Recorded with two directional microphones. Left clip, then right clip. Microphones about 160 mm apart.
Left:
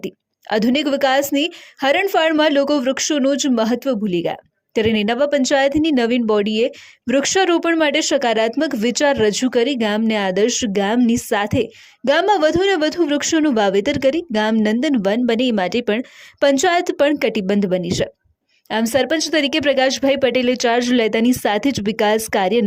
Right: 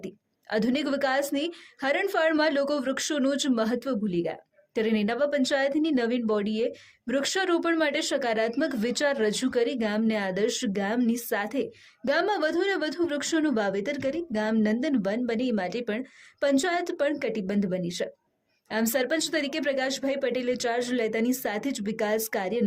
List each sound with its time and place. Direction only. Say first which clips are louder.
0.0 s a woman's voice: left 11 dB; 45° left (ahead or behind)